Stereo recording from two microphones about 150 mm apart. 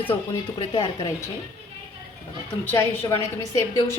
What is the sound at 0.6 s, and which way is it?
Speech, 30° left (ahead or behind).